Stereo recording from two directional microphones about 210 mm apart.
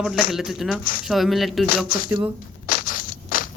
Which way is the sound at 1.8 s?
45° left (ahead or behind).